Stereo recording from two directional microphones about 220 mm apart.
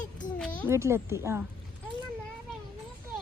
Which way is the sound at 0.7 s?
10° right (ahead or behind).